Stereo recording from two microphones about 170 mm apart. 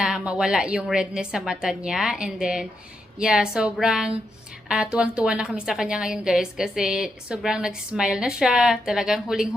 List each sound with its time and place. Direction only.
0.0 s a woman's voice: 5° right (ahead or behind)